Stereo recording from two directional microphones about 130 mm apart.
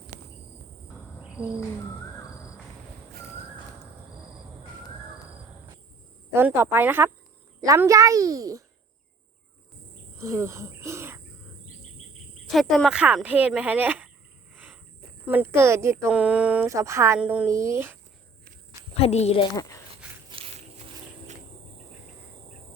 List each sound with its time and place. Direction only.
6.3 s a child's voice: 20° right (ahead or behind)
10.2 s speech: 20° right (ahead or behind)
12.5 s speech: centre (ahead or behind)
14.5 s cricket: 10° right (ahead or behind)
15.3 s a child's voice: 15° right (ahead or behind)
16.0 s speech: 10° right (ahead or behind)
16.6 s a child's voice: 25° right (ahead or behind)
17.2 s speech: 10° right (ahead or behind)
17.4 s a child's voice: 20° right (ahead or behind)
18.9 s a woman's voice: 50° left (ahead or behind)
19.5 s speech: 25° left (ahead or behind)
20.3 s a sound: 50° right (ahead or behind)